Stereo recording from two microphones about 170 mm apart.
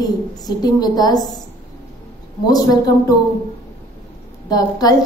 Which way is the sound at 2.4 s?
20° left (ahead or behind).